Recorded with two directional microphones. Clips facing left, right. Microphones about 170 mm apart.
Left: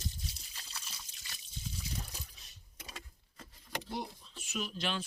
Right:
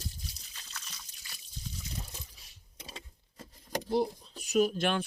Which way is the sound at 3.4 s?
40° right (ahead or behind).